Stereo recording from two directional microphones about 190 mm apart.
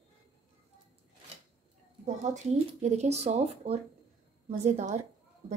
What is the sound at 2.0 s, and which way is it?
Speech, 35° right (ahead or behind).